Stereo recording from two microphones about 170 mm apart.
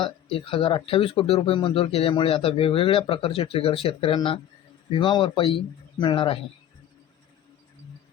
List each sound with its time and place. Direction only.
0.0 s speech: 30° left (ahead or behind)